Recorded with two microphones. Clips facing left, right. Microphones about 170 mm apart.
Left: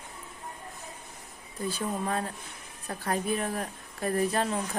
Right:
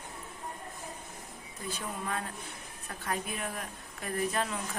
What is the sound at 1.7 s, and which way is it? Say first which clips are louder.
A woman's voice: left 6 dB; 35° left (ahead or behind).